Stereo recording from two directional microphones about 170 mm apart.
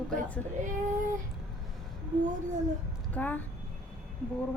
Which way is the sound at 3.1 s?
10° left (ahead or behind).